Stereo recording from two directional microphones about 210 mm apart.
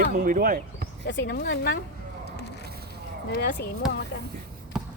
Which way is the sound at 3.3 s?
55° left (ahead or behind).